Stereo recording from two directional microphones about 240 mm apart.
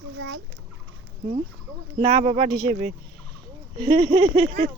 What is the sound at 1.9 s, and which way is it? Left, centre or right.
Speech, right.